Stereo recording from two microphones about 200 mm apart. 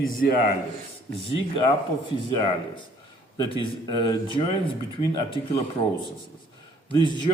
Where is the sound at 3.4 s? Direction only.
25° left (ahead or behind).